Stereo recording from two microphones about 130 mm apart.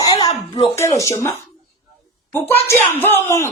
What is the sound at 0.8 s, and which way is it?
Speech, 25° left (ahead or behind).